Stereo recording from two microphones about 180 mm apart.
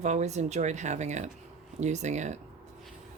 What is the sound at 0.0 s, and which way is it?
Speech, 40° right (ahead or behind).